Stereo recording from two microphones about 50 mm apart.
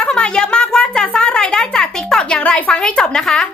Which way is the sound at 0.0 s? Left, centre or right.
Centre.